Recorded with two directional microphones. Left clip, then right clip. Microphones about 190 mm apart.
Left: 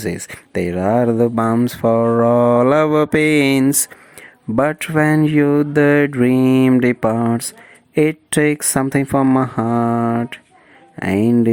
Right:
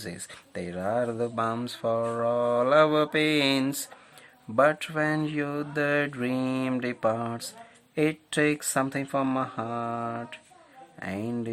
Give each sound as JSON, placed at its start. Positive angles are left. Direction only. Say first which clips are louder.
{"t": 0.0, "sound": "speech", "louder": "left 15 dB", "side_deg": 35}